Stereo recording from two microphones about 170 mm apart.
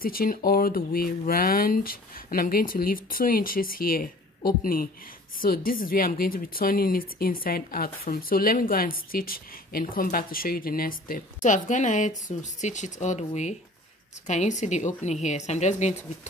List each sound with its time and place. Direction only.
0.0 s a woman's voice: 60° left (ahead or behind); by 16.0 s 40° left (ahead or behind)